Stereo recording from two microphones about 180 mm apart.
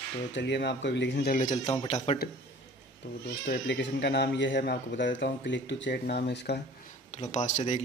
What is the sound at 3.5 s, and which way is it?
Speech, 75° left (ahead or behind).